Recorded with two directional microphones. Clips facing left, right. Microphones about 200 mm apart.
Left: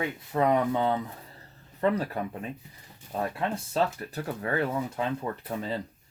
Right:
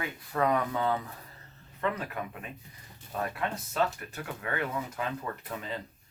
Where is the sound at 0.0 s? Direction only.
25° left (ahead or behind).